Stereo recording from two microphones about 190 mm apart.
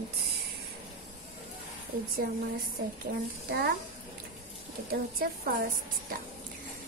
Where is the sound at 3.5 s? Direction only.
60° right (ahead or behind).